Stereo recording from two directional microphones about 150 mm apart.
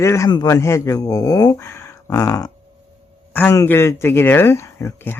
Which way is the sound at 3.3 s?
10° left (ahead or behind).